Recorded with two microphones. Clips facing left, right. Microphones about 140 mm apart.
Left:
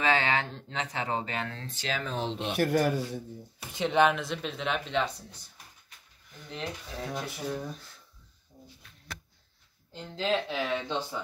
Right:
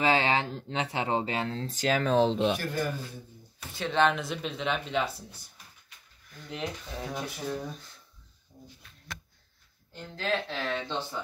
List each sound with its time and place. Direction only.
0.0 s speech: 30° right (ahead or behind)
2.5 s speech: 70° left (ahead or behind)
3.7 s speech: 15° left (ahead or behind)
4.1 s speech: centre (ahead or behind)
6.5 s speech: 5° right (ahead or behind)
9.9 s speech: 20° left (ahead or behind)